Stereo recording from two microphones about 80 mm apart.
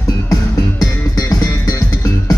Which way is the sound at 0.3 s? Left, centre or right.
Left.